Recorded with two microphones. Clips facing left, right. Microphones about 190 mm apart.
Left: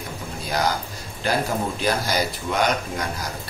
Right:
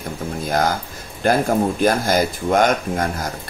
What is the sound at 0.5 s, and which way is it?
Speech, 50° right (ahead or behind).